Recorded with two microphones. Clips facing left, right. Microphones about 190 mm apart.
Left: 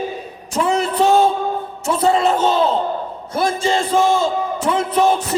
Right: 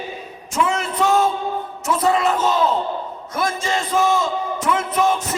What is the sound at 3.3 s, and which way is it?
A man's voice, 30° left (ahead or behind).